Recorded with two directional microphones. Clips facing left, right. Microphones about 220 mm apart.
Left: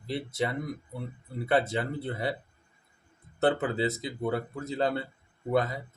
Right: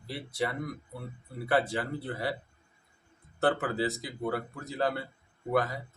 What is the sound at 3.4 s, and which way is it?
Speech, 20° left (ahead or behind).